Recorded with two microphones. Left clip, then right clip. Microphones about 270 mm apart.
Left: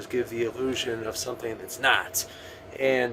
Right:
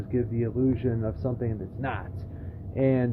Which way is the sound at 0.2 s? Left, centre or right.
Centre.